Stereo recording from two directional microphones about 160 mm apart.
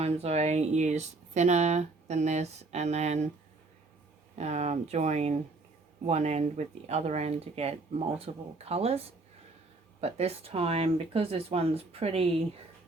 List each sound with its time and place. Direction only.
0.0 s speech: 40° right (ahead or behind)
4.4 s speech: 45° right (ahead or behind)